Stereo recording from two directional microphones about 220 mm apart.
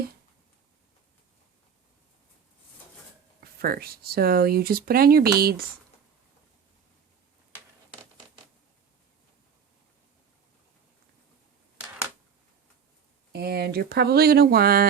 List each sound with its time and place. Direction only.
3.4 s speech: 45° right (ahead or behind)
13.3 s speech: 45° right (ahead or behind)